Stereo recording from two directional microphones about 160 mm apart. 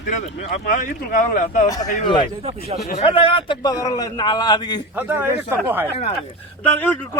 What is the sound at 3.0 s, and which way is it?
A man's voice, 35° left (ahead or behind).